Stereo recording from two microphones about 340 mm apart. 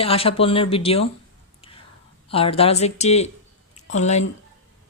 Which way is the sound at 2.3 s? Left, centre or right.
Centre.